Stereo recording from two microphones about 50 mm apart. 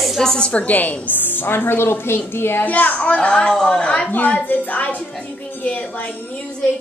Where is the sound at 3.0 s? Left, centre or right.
Left.